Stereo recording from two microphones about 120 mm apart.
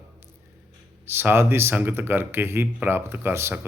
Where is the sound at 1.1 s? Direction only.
20° right (ahead or behind).